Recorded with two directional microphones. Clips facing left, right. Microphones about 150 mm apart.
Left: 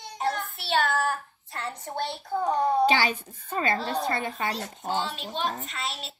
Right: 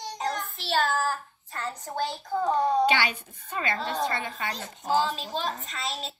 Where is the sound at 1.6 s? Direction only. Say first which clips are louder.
Even; 25° left (ahead or behind).